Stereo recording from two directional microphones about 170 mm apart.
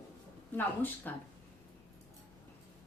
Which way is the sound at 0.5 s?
10° left (ahead or behind).